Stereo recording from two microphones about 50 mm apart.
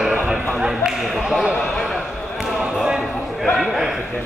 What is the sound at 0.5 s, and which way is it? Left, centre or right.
Speech, centre.